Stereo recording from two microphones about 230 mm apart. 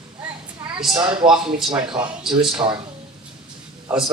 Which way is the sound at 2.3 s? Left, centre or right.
Centre.